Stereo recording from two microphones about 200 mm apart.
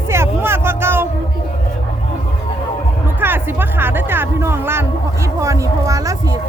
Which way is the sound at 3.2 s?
10° right (ahead or behind).